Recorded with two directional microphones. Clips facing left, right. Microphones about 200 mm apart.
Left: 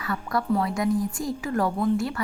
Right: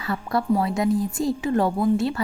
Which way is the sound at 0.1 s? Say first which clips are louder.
Right 3 dB; 25° right (ahead or behind).